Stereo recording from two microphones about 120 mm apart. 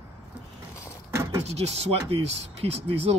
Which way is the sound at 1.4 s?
60° right (ahead or behind).